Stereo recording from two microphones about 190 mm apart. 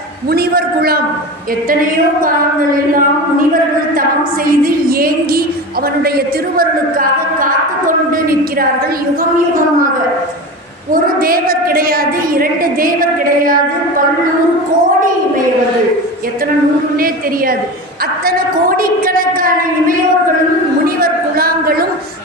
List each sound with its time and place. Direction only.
0.3 s a woman's voice: 55° right (ahead or behind)
2.7 s a woman's voice: 45° right (ahead or behind)
4.4 s a woman's voice: 50° right (ahead or behind)
10.9 s a woman's voice: 50° right (ahead or behind)
18.3 s a woman's voice: 50° right (ahead or behind)
20.8 s a sound: 50° right (ahead or behind)